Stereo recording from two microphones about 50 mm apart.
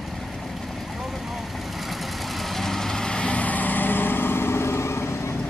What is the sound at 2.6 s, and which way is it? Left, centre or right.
Vehicle, centre.